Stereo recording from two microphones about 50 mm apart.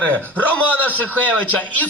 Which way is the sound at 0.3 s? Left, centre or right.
Left.